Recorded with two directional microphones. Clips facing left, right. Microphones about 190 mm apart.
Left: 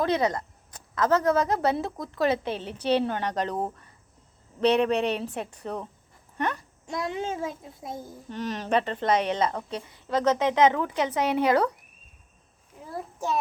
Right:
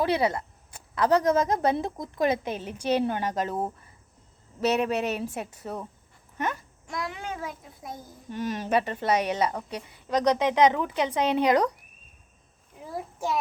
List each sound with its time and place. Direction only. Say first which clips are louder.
0.0 s speech: even; 10° right (ahead or behind)
6.8 s a child's voice: left 4 dB; 25° left (ahead or behind)
8.3 s speech: even; 10° right (ahead or behind)